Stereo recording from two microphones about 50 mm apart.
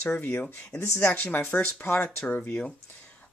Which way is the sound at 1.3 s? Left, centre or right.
Left.